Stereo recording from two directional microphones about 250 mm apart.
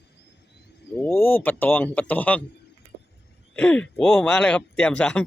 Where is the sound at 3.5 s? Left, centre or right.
Centre.